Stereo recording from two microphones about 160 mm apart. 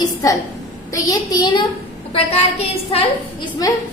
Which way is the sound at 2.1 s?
40° left (ahead or behind).